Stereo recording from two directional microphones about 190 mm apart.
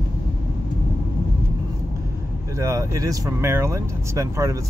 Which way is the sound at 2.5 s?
15° right (ahead or behind).